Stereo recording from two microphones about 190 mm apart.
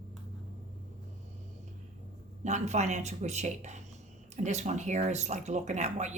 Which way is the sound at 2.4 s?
35° right (ahead or behind).